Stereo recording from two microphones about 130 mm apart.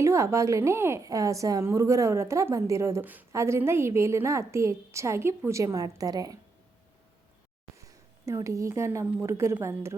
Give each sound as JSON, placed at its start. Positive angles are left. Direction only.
{"t": 0.0, "sound": "a woman's voice", "side_deg": -20}
{"t": 8.2, "sound": "a woman's voice", "side_deg": -25}